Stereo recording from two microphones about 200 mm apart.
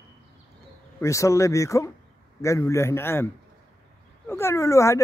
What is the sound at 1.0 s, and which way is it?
Speech, 15° left (ahead or behind).